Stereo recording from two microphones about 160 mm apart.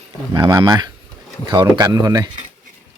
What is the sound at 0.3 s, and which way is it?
Speech, 20° right (ahead or behind).